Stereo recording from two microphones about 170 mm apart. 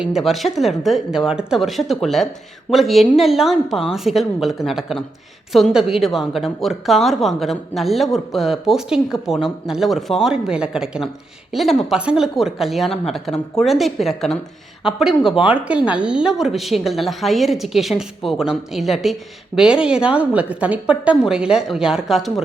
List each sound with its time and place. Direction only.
0.0 s a woman's voice: centre (ahead or behind)